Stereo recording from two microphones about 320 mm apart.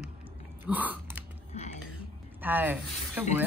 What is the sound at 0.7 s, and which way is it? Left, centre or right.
Biting, centre.